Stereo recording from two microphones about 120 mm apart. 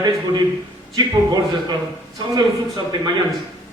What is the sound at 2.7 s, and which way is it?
Speech, 40° right (ahead or behind).